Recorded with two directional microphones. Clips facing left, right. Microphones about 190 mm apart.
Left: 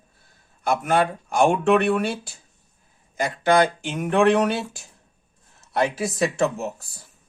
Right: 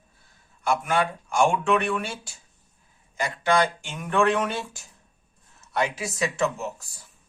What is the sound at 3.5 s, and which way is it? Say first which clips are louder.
Speech: left 4 dB; 50° left (ahead or behind).